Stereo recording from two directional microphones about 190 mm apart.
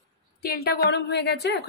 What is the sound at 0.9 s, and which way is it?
Speech, 60° left (ahead or behind).